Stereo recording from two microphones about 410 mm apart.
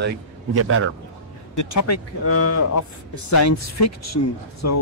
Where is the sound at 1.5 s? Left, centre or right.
Left.